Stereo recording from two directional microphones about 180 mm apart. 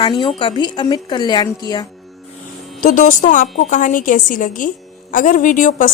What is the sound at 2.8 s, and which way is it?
A woman's voice, 45° left (ahead or behind).